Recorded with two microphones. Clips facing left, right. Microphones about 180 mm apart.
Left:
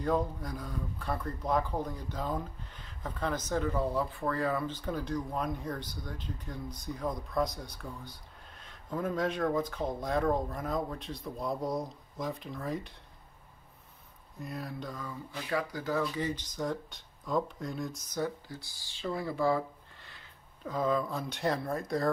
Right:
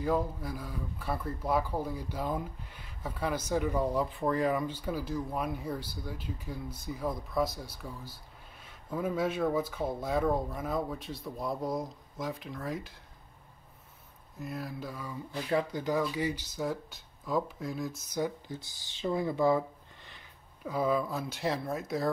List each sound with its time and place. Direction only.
0.0 s speech: 5° right (ahead or behind)
14.4 s speech: centre (ahead or behind)
15.3 s speech: 20° right (ahead or behind)
16.0 s speech: 10° right (ahead or behind)